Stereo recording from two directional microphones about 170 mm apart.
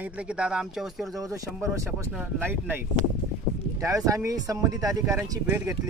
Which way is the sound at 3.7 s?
20° right (ahead or behind).